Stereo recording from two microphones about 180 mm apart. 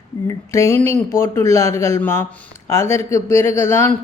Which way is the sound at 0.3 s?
15° left (ahead or behind).